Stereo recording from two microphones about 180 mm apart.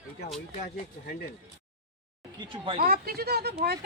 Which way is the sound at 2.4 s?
30° right (ahead or behind).